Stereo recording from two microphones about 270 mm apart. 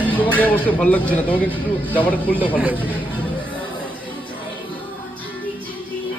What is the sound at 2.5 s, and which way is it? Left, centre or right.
Speech, centre.